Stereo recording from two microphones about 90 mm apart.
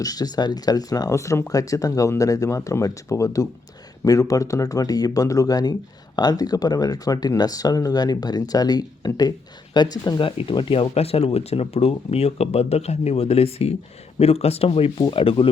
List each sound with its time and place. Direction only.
0.0 s speech: 45° left (ahead or behind)
10.2 s speech: 80° left